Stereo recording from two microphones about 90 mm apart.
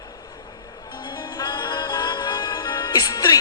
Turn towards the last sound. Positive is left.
turn(degrees=45)  # may be behind; listen again after turning